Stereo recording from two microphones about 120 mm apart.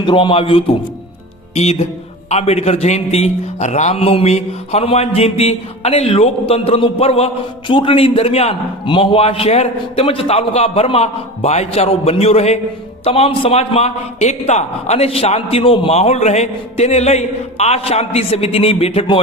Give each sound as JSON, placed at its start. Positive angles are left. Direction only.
{"t": 0.0, "sound": "a man's voice", "side_deg": 45}
{"t": 1.5, "sound": "a man's voice", "side_deg": 65}
{"t": 7.7, "sound": "a man's voice", "side_deg": 45}